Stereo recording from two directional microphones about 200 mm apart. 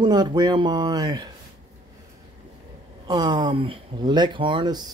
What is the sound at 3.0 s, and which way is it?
Speech, 20° right (ahead or behind).